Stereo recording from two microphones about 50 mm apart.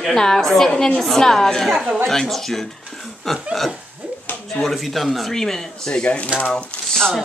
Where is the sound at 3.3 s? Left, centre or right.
Centre.